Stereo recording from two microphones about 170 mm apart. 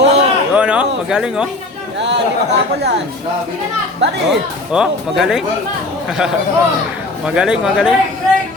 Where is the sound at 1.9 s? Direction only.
90° right.